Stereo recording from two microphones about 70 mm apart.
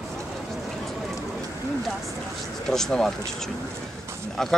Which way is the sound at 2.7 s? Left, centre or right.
Centre.